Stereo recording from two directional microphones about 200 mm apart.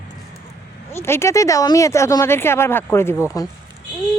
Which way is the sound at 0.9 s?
15° left (ahead or behind).